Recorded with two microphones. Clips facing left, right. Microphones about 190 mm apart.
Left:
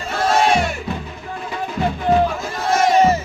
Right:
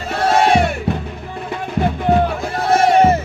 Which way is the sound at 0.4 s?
60° right (ahead or behind).